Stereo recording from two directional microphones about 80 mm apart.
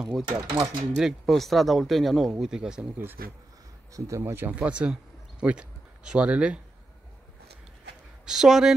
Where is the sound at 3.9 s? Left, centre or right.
Right.